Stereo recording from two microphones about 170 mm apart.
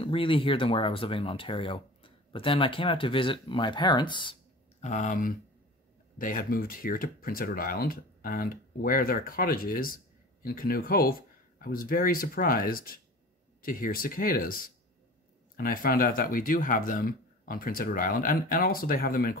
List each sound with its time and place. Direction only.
0.0 s speech: 30° left (ahead or behind)
4.7 s speech: 45° left (ahead or behind)